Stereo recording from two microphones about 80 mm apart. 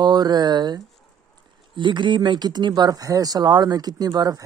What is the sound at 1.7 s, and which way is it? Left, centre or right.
Speech, right.